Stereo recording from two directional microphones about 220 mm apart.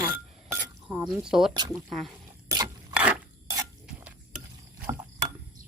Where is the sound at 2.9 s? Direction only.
5° right (ahead or behind).